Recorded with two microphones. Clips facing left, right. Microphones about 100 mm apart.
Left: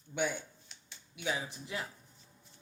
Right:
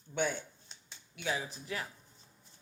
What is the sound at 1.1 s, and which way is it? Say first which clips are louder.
Speech: even; 15° left (ahead or behind).